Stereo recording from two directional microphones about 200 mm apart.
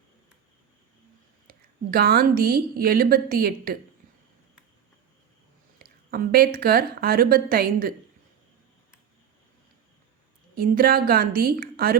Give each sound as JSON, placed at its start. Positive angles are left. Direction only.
{"t": 1.5, "sound": "a woman's voice", "side_deg": -50}
{"t": 5.8, "sound": "a woman's voice", "side_deg": -50}
{"t": 10.6, "sound": "a woman's voice", "side_deg": -45}